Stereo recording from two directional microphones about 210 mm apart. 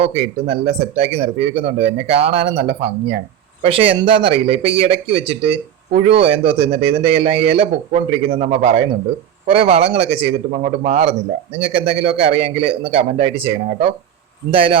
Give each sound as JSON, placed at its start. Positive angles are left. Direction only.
{"t": 0.0, "sound": "speech", "side_deg": -30}